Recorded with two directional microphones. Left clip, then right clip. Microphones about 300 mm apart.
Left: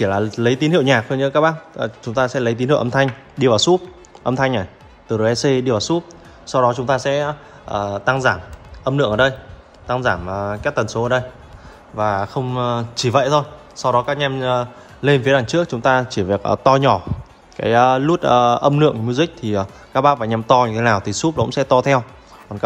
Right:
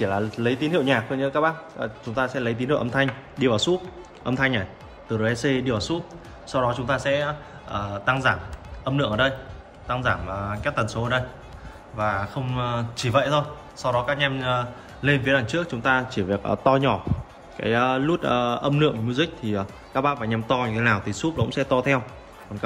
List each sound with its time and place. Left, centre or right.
0.3 s a man's voice: left
17.6 s a man's voice: centre
22.5 s speech: right